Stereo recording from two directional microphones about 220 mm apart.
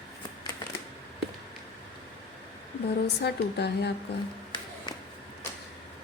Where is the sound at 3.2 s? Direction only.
50° left (ahead or behind).